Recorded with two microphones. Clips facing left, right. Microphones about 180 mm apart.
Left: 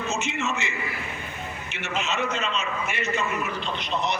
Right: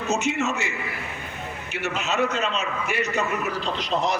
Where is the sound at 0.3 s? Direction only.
40° right (ahead or behind).